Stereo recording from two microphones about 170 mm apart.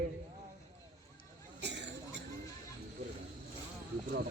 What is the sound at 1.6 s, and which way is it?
Cough, 90° right.